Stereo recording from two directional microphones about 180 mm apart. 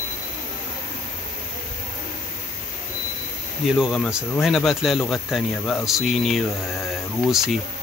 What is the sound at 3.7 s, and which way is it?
Speech, centre (ahead or behind).